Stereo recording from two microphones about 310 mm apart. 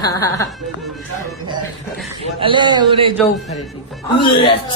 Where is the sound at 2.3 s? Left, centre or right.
Centre.